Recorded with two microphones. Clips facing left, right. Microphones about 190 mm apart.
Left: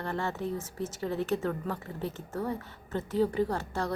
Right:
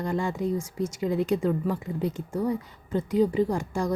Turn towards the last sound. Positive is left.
turn(degrees=-10)  # may be behind; listen again after turning